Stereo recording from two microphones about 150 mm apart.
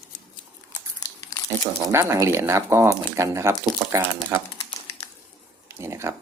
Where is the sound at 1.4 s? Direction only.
20° right (ahead or behind).